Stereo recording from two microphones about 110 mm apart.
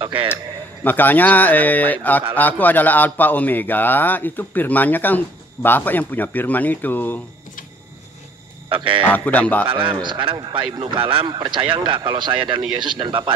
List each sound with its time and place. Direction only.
0.0 s speech: 50° right (ahead or behind)
0.8 s a man's voice: 15° left (ahead or behind)
8.6 s speech: 50° right (ahead or behind)
9.1 s a man's voice: 15° left (ahead or behind)
9.7 s speech: 50° right (ahead or behind)
10.8 s speech: 55° right (ahead or behind)